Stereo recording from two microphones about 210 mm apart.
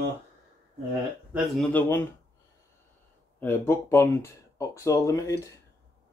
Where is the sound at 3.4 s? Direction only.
10° left (ahead or behind).